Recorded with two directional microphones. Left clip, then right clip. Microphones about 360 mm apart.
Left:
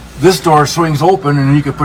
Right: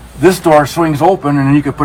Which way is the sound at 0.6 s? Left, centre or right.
Right.